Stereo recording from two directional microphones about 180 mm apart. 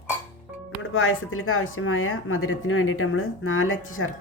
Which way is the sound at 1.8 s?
90° left.